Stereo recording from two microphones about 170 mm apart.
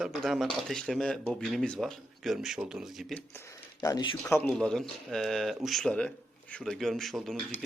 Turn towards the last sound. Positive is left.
turn(degrees=0)  # may be behind; listen again after turning